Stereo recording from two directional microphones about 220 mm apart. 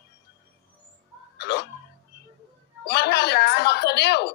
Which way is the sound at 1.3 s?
50° left (ahead or behind).